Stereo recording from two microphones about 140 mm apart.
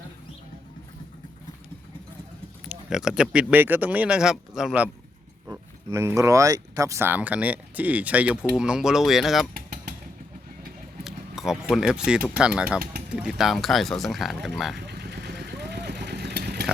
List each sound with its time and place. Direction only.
2.6 s speech: 5° right (ahead or behind)
5.5 s speech: 20° right (ahead or behind); by 9.5 s centre (ahead or behind)
9.6 s vehicle: 90° right
11.0 s a sound: 5° right (ahead or behind)
11.7 s speech: 5° right (ahead or behind)
16.3 s vehicle: 90° right